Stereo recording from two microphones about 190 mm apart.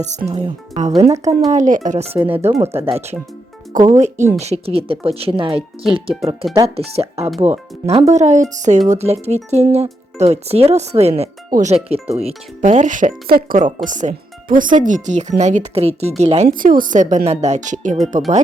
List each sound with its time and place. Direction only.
0.0 s speech: 40° right (ahead or behind)